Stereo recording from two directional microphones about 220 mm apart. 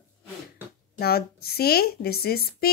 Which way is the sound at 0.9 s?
45° left (ahead or behind).